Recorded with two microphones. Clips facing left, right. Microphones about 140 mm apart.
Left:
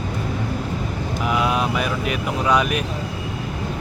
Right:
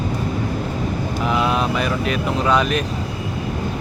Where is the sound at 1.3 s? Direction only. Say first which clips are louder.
Right 1 dB; 10° left (ahead or behind).